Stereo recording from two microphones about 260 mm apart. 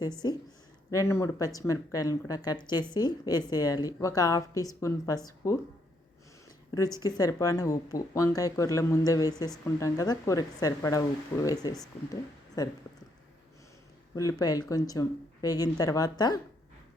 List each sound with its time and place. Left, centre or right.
0.9 s speech: centre
6.7 s speech: centre
14.2 s speech: centre